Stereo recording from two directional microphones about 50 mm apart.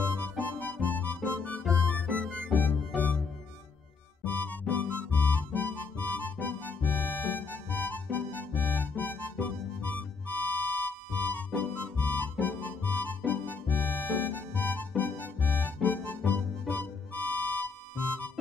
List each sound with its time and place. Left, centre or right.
0.2 s music: left
4.2 s music: left